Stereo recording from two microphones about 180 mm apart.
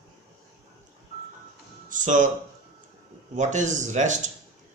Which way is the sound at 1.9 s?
45° right (ahead or behind).